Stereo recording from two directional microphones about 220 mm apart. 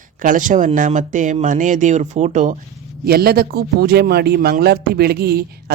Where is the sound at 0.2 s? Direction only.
35° right (ahead or behind).